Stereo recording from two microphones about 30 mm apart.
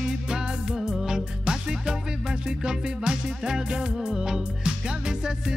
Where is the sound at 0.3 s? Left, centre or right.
Right.